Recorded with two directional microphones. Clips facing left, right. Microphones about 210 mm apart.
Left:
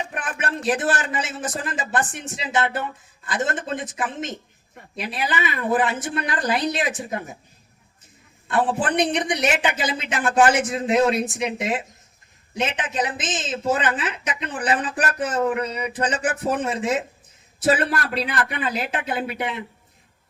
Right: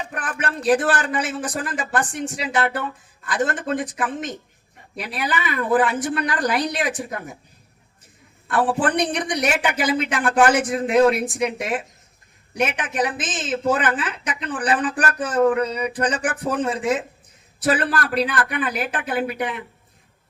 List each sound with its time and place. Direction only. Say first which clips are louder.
0.1 s a woman's voice: even; 25° left (ahead or behind)
8.4 s a woman's voice: right 1 dB; 25° left (ahead or behind)